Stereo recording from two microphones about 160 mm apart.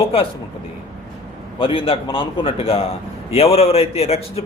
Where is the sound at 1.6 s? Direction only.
35° left (ahead or behind).